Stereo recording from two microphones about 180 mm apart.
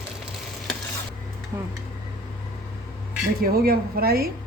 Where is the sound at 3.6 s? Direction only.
55° right (ahead or behind).